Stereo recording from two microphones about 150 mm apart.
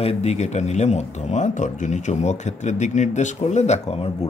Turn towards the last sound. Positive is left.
turn(degrees=45)  # may be behind; listen again after turning